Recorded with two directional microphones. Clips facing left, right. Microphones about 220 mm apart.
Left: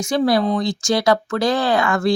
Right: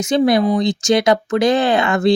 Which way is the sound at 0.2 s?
20° right (ahead or behind).